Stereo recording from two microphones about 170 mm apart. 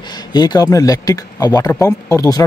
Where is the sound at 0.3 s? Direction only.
25° left (ahead or behind).